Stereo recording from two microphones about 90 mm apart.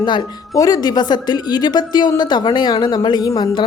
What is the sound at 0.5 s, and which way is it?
A woman's voice, 40° left (ahead or behind).